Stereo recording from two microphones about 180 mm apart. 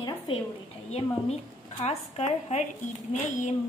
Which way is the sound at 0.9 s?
35° left (ahead or behind).